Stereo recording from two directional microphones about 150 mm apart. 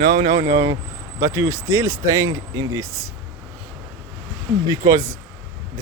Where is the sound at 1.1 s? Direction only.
20° right (ahead or behind).